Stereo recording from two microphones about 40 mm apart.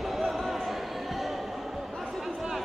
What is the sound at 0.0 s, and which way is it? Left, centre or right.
Basketball bounce, centre.